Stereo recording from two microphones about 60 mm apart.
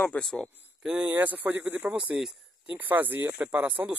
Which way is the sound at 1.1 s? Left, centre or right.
Right.